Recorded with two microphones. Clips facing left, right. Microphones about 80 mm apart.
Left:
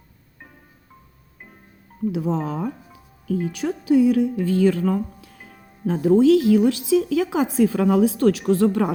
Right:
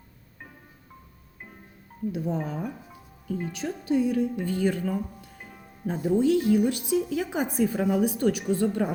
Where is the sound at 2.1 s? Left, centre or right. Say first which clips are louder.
Left 5 dB; left.